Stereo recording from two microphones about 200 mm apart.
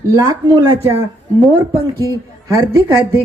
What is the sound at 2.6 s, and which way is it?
Speech, 15° right (ahead or behind).